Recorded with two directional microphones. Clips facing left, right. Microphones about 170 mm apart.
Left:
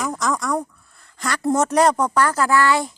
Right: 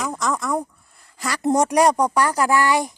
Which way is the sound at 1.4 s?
15° right (ahead or behind).